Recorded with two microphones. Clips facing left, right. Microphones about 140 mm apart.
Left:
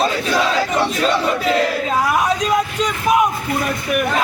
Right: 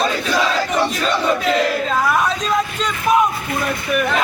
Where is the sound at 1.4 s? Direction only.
10° left (ahead or behind).